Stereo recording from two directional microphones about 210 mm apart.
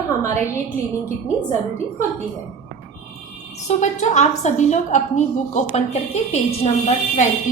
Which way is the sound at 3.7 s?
35° left (ahead or behind).